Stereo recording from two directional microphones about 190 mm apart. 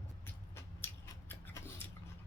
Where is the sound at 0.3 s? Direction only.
15° left (ahead or behind).